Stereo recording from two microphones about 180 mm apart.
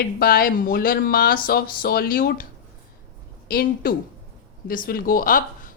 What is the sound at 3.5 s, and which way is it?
Speech, 55° left (ahead or behind).